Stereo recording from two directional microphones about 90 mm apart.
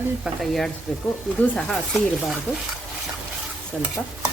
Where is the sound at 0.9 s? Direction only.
5° left (ahead or behind).